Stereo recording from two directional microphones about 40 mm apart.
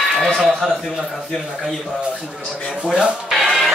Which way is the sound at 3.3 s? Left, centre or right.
Centre.